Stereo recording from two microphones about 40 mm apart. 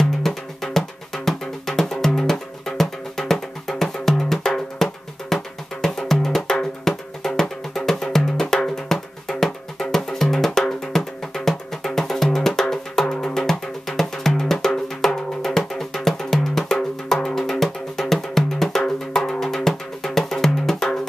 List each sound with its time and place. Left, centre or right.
0.0 s music: centre